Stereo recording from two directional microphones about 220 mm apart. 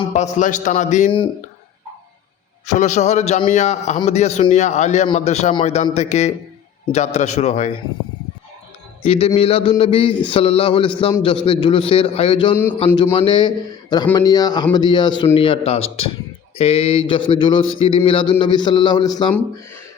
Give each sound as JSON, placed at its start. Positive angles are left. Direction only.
{"t": 0.1, "sound": "a man's voice", "side_deg": 35}
{"t": 2.6, "sound": "a man's voice", "side_deg": 35}
{"t": 9.0, "sound": "speech", "side_deg": 25}